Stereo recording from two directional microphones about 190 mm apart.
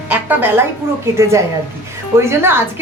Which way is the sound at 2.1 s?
15° right (ahead or behind).